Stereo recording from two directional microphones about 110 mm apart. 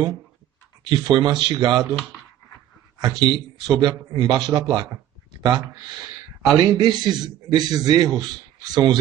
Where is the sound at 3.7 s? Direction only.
40° right (ahead or behind).